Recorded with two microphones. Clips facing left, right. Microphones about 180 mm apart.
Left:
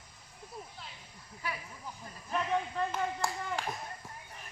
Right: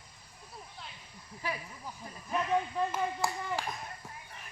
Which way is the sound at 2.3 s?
5° right (ahead or behind).